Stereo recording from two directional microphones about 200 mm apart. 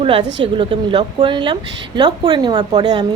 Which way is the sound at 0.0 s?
30° right (ahead or behind).